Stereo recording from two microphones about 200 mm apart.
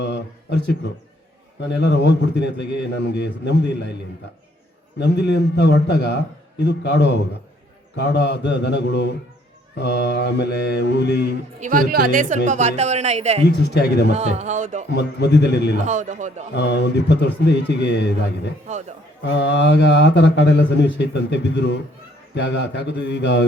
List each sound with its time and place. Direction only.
0.0 s a man's voice: 60° left (ahead or behind)
4.9 s a man's voice: 55° left (ahead or behind)
11.6 s a man's voice: 45° right (ahead or behind)
13.5 s a man's voice: 55° left (ahead or behind)
14.1 s a man's voice: 35° right (ahead or behind)
14.8 s a man's voice: 55° left (ahead or behind)
15.8 s a man's voice: 35° right (ahead or behind)
16.6 s a man's voice: 60° left (ahead or behind)
18.7 s a man's voice: 35° right (ahead or behind)
19.2 s a man's voice: 60° left (ahead or behind)